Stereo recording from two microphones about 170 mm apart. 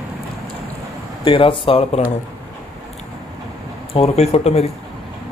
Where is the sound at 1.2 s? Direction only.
30° left (ahead or behind).